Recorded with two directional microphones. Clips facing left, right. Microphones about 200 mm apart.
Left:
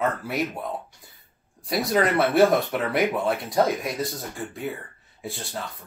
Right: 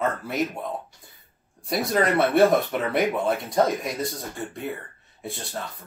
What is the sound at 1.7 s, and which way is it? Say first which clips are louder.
Speech: even; centre (ahead or behind).